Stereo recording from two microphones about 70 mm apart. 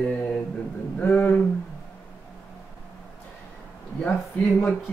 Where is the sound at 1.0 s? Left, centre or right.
Left.